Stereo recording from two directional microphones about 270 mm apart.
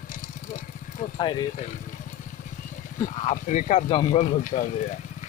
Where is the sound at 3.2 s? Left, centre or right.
Left.